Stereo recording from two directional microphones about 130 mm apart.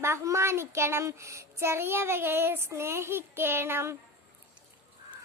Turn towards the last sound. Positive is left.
turn(degrees=-20)  # may be behind; listen again after turning